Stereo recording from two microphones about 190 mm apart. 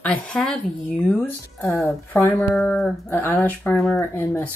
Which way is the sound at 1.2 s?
15° left (ahead or behind).